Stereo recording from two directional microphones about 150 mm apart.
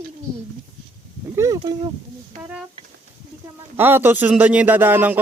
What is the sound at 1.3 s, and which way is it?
Speech, 20° right (ahead or behind).